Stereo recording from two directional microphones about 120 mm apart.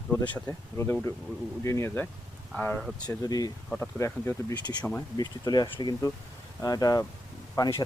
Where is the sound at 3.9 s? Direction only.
20° left (ahead or behind).